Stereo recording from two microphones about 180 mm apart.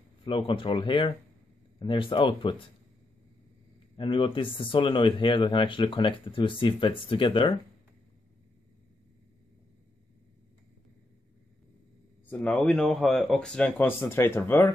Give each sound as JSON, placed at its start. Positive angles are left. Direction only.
{"t": 0.2, "sound": "speech", "side_deg": 25}
{"t": 3.9, "sound": "speech", "side_deg": 30}
{"t": 12.3, "sound": "speech", "side_deg": 5}